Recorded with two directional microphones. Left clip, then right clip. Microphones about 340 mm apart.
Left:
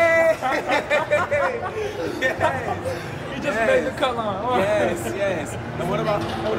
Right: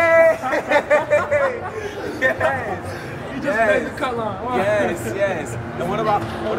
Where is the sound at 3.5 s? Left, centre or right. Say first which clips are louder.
Right 2 dB; centre.